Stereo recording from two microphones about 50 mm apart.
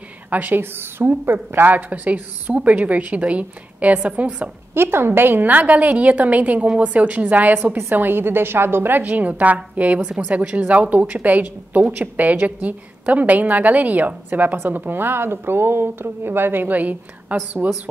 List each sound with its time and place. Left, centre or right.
0.3 s a woman's voice: right
0.6 s a woman's voice: right
4.7 s a woman's voice: right
16.6 s a woman's voice: right